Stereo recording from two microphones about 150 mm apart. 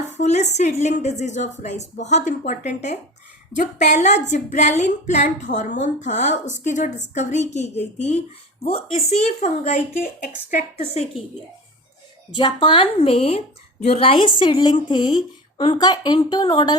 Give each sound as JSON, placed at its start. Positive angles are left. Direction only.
{"t": 0.2, "sound": "a woman's voice", "side_deg": 50}
{"t": 12.3, "sound": "a woman's voice", "side_deg": 30}